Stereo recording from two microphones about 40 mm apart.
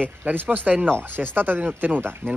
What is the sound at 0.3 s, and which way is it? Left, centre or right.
Speech, right.